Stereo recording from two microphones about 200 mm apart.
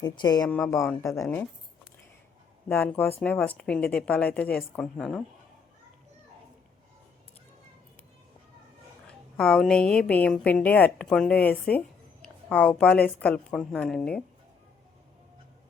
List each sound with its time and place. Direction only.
0.0 s speech: 20° left (ahead or behind)
0.4 s a woman's voice: 5° left (ahead or behind)
0.7 s a woman's voice: 15° left (ahead or behind)
2.6 s a woman's voice: 10° left (ahead or behind)
9.0 s a woman's voice: centre (ahead or behind)